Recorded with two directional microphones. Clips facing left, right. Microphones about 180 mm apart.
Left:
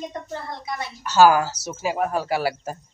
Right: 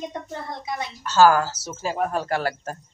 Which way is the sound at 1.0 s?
10° left (ahead or behind).